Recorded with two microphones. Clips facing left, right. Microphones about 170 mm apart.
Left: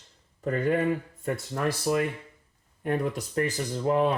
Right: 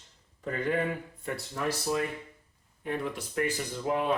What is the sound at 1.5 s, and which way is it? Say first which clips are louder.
Speech: left 4 dB; 55° left (ahead or behind).